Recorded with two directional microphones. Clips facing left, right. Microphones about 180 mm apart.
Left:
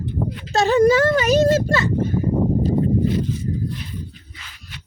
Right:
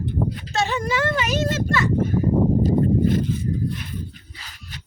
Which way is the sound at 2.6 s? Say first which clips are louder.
Even; 50° right (ahead or behind).